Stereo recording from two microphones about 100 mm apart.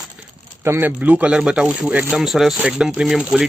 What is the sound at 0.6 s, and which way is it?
Speech, 20° right (ahead or behind).